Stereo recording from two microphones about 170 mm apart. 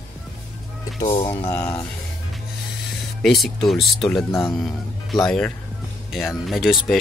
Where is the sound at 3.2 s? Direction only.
Centre (ahead or behind).